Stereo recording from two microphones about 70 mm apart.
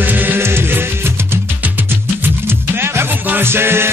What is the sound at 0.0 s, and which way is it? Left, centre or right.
Music, right.